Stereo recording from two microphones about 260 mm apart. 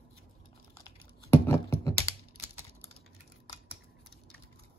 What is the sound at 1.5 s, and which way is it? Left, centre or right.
Computer keyboard, centre.